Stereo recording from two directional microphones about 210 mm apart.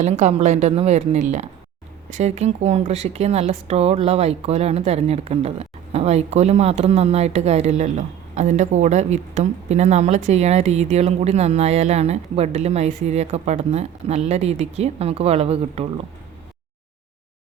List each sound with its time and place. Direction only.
0.0 s speech: 30° right (ahead or behind)